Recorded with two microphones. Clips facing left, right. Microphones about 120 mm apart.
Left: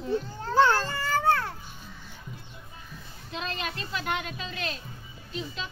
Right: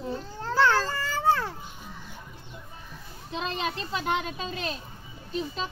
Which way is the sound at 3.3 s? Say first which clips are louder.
Right 3 dB; 25° right (ahead or behind).